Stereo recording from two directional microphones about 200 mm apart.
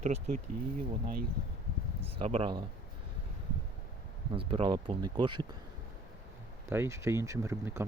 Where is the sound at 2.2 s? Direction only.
30° right (ahead or behind).